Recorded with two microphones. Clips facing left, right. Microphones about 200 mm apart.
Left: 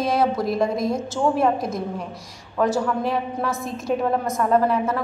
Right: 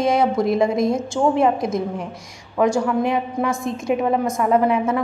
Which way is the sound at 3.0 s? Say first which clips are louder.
Right 3 dB; 15° right (ahead or behind).